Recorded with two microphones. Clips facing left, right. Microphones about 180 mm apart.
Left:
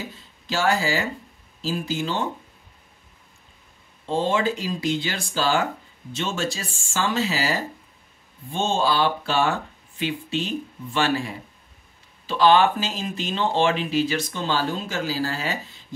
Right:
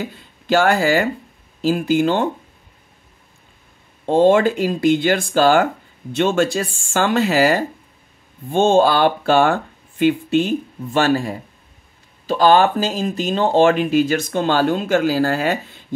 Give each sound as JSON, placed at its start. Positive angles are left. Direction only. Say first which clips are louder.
{"t": 0.0, "sound": "speech", "louder": "right 8 dB", "side_deg": -60}
{"t": 4.0, "sound": "speech", "louder": "right 10 dB", "side_deg": -55}